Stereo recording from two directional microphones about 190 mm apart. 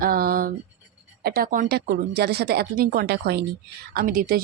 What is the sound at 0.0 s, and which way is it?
Speech, 50° right (ahead or behind).